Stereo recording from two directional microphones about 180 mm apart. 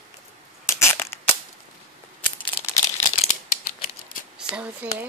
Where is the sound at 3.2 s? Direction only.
40° left (ahead or behind).